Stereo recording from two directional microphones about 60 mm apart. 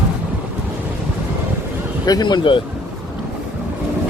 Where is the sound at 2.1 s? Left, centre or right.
Left.